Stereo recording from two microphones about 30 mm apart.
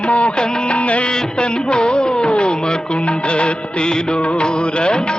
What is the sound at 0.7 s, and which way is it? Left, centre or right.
Music, left.